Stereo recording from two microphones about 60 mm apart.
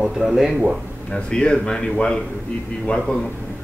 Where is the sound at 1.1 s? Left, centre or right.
Centre.